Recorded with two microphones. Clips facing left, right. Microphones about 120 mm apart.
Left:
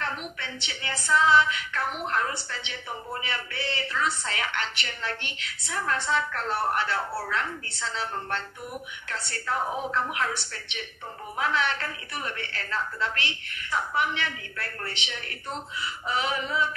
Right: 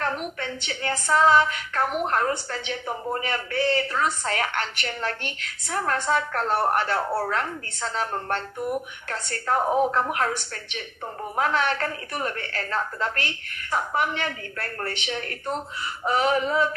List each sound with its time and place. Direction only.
0.0 s speech: 45° right (ahead or behind)